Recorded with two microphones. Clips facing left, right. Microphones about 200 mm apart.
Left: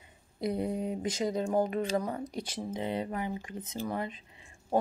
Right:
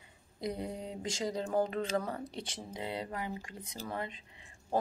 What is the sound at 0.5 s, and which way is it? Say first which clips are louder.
Speech: left 7 dB; 20° left (ahead or behind).